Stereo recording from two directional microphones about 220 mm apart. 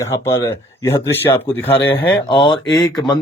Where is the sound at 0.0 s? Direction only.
15° left (ahead or behind).